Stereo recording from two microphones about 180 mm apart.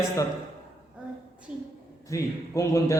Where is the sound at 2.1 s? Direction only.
15° left (ahead or behind).